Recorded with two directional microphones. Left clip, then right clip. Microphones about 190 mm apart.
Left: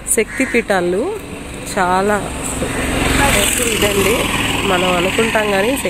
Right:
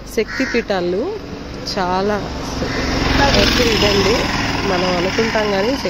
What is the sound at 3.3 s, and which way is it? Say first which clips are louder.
Speech: right 2 dB; 50° right (ahead or behind).